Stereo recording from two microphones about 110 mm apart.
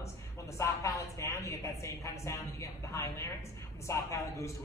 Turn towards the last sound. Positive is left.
turn(degrees=25)  # may be behind; listen again after turning